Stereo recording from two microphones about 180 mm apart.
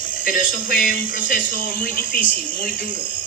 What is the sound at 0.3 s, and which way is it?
Speech, 50° left (ahead or behind).